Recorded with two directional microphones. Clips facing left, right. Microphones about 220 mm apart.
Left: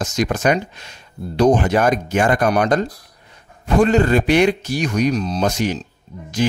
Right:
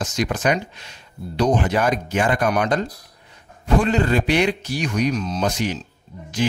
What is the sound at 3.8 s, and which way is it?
Speech, 45° left (ahead or behind).